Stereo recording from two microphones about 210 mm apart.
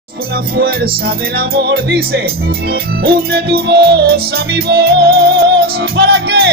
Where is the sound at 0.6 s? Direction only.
45° right (ahead or behind).